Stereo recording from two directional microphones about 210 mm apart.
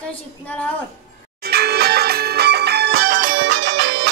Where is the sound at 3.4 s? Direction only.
60° right (ahead or behind).